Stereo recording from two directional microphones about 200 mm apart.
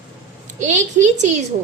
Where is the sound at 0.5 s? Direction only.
40° right (ahead or behind).